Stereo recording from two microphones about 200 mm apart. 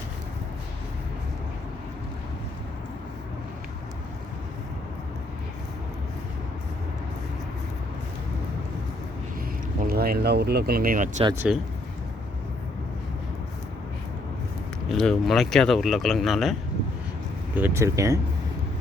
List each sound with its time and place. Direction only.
9.8 s speech: 50° right (ahead or behind)
11.4 s speech: 5° right (ahead or behind)
14.8 s speech: centre (ahead or behind)
17.5 s speech: 10° right (ahead or behind)